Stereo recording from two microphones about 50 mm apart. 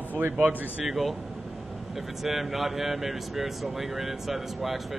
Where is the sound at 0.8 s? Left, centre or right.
Centre.